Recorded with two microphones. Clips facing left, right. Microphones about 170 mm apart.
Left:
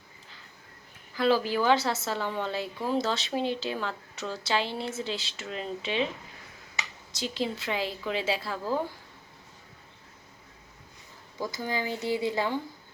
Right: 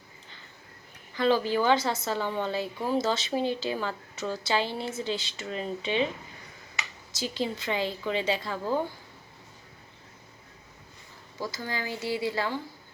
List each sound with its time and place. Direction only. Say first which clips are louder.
1.1 s a woman's voice: right 1 dB; centre (ahead or behind)
7.1 s a woman's voice: even; centre (ahead or behind)
11.3 s speech: left 2 dB; 15° left (ahead or behind)